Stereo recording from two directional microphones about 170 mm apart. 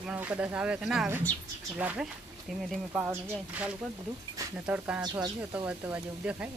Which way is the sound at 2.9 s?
10° right (ahead or behind).